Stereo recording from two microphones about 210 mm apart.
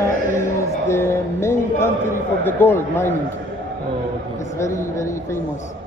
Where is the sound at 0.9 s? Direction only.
10° left (ahead or behind).